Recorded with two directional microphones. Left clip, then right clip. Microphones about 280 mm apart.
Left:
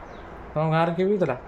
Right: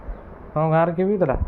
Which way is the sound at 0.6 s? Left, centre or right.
Centre.